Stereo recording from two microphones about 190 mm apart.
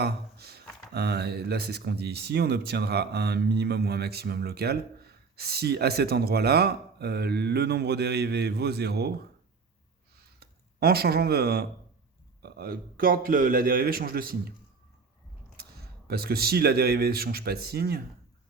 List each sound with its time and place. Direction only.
0.0 s a sound: 55° right (ahead or behind)
0.9 s speech: 60° right (ahead or behind)
10.4 s a man's voice: 55° right (ahead or behind)
15.5 s speech: 55° right (ahead or behind)